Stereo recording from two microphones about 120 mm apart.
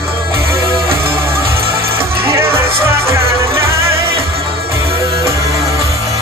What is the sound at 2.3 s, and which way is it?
Music, 20° right (ahead or behind).